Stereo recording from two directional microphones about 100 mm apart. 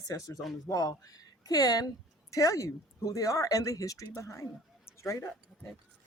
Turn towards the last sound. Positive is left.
turn(degrees=30)  # may be behind; listen again after turning